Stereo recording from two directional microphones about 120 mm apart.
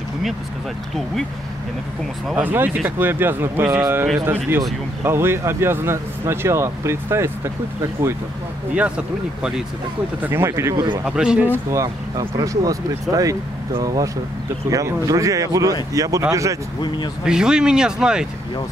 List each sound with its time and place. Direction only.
2.3 s speech: 15° right (ahead or behind)
8.7 s speech: 10° right (ahead or behind)
11.1 s speech: 5° right (ahead or behind)
11.7 s speech: 30° right (ahead or behind)
17.2 s speech: 5° right (ahead or behind)